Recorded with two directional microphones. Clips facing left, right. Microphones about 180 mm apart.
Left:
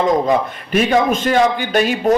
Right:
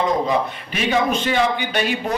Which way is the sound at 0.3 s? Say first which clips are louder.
Left 4 dB; 45° left (ahead or behind).